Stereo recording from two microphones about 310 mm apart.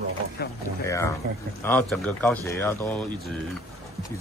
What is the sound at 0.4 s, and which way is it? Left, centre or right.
Boat, left.